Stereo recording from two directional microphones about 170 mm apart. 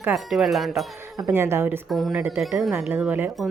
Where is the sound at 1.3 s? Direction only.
15° right (ahead or behind).